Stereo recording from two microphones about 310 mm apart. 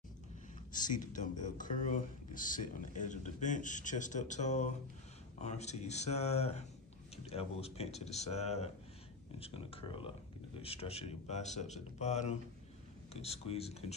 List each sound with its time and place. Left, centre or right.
0.7 s speech: left